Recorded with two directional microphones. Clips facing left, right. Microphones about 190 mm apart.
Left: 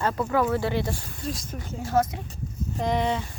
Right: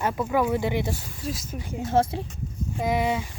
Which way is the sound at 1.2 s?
5° right (ahead or behind).